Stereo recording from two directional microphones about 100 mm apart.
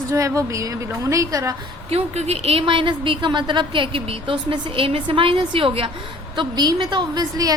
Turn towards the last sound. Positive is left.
turn(degrees=-40)  # may be behind; listen again after turning